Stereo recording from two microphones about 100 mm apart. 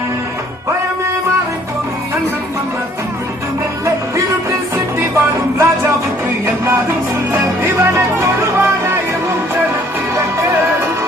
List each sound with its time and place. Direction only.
4.9 s music: 25° right (ahead or behind)